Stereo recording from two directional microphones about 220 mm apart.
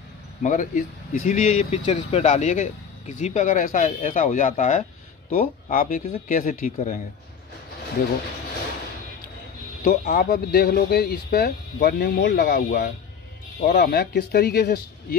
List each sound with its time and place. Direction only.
0.4 s speech: 35° left (ahead or behind)
9.8 s speech: 35° left (ahead or behind)